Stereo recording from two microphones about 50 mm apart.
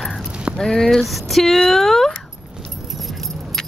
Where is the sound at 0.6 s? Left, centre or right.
Centre.